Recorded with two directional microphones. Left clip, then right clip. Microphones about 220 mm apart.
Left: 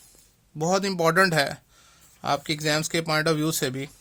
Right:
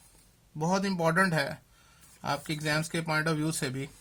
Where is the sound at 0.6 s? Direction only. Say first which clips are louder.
Left 6 dB; 40° left (ahead or behind).